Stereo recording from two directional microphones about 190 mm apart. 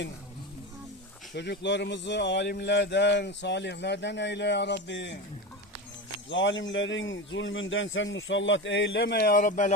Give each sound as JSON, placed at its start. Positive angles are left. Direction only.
{"t": 1.4, "sound": "speech", "side_deg": 65}
{"t": 6.3, "sound": "a man's voice", "side_deg": 75}